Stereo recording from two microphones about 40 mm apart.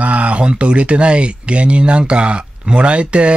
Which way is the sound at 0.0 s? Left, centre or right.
Right.